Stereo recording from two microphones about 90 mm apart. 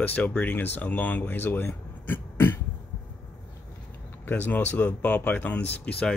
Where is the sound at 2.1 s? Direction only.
25° left (ahead or behind).